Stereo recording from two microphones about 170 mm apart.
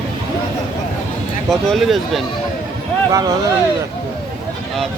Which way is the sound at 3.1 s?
20° right (ahead or behind).